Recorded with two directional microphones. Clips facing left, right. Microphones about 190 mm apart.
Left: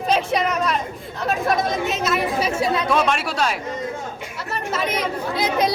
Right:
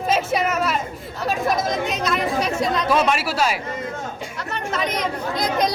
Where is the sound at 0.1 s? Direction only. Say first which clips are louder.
Left 1 dB; 5° right (ahead or behind).